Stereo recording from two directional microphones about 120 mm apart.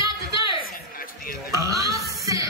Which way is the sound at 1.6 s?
30° right (ahead or behind).